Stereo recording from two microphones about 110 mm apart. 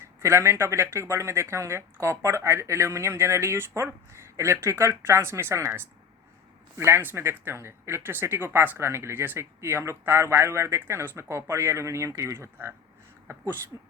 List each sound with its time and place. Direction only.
0.0 s speech: 25° right (ahead or behind)